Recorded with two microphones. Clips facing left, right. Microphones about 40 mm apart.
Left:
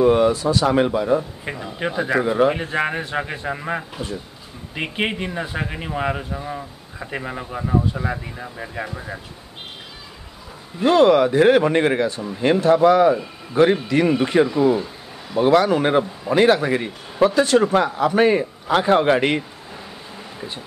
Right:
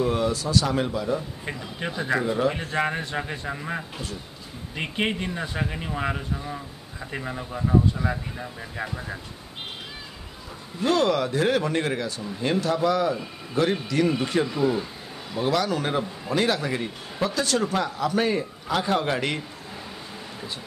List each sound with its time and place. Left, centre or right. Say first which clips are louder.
0.0 s speech: left 9 dB; left
0.3 s speech: left 5 dB; left
0.7 s speech: left 8 dB; left
1.4 s speech: left 5 dB; left
10.8 s a man's voice: left 8 dB; left
15.9 s a man's voice: left 7 dB; left